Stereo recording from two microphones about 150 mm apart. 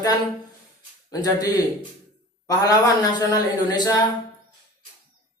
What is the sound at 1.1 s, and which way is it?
A man's voice, 25° left (ahead or behind).